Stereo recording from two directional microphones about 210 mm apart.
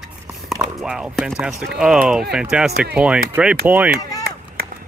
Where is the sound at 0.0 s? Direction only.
Centre (ahead or behind).